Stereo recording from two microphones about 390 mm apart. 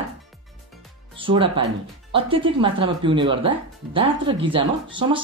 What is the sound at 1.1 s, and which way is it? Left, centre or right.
Music, centre.